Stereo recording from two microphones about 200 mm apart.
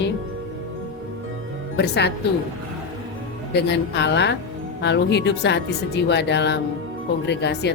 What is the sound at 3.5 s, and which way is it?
Speech, 55° left (ahead or behind).